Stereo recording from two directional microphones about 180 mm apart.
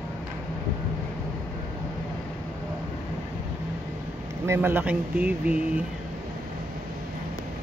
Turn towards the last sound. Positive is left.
turn(degrees=-10)  # may be behind; listen again after turning